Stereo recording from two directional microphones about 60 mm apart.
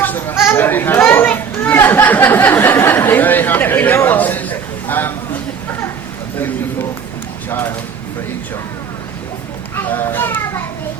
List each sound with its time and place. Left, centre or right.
0.0 s chatter: left
0.5 s speech: left
0.9 s children playing: left
1.6 s a man's voice: left
7.5 s speech: left
9.7 s child singing: left